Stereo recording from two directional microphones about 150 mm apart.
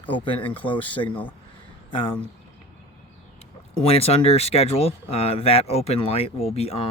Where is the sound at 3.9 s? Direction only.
40° left (ahead or behind).